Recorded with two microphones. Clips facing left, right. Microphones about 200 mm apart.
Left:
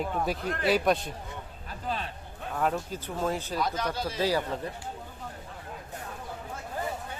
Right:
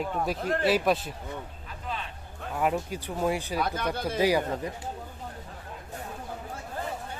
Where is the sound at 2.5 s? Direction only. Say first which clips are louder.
Right 2 dB; 10° right (ahead or behind).